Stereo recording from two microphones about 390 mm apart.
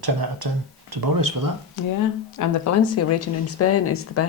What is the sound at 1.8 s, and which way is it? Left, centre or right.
Speech, left.